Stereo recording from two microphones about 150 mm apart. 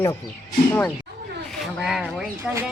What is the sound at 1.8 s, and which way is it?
Speech, 5° right (ahead or behind).